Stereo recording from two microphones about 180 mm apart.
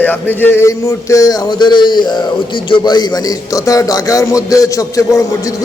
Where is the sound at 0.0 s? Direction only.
10° left (ahead or behind).